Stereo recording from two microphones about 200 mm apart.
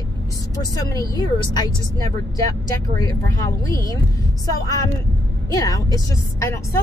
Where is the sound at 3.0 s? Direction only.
20° left (ahead or behind).